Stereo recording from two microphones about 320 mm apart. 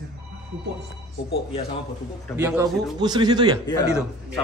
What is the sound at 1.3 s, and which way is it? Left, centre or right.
Speech, centre.